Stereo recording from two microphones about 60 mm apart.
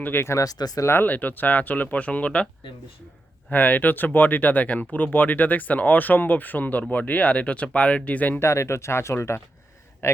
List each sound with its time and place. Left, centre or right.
0.0 s speech: left
0.4 s speech: left
1.0 s speech: left
3.5 s speech: left
8.4 s a man's voice: left